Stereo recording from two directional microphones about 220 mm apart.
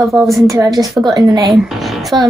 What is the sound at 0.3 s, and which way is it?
A woman's voice, 15° right (ahead or behind).